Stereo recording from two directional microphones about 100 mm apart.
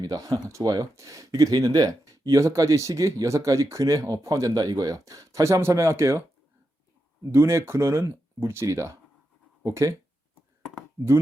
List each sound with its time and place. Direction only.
0.0 s speech: 35° right (ahead or behind)
7.3 s speech: 25° right (ahead or behind)